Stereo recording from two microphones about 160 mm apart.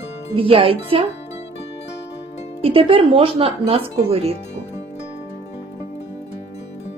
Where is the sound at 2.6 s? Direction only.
35° right (ahead or behind).